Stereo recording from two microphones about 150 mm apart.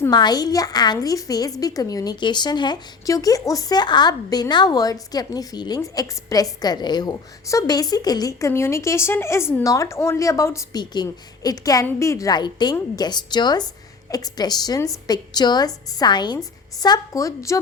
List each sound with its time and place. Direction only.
0.1 s a woman's voice: 25° left (ahead or behind)